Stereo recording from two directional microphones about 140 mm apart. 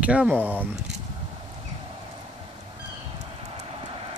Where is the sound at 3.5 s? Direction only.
40° right (ahead or behind).